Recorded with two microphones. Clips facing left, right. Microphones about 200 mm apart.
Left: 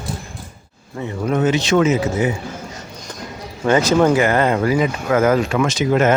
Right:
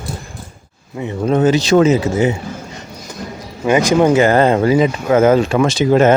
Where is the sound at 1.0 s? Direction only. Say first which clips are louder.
Right 4 dB; 25° right (ahead or behind).